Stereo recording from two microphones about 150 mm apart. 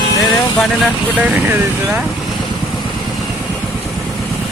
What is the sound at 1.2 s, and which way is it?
Speech, 10° right (ahead or behind).